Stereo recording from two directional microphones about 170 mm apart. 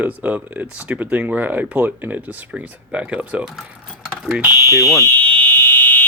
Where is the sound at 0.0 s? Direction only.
10° right (ahead or behind).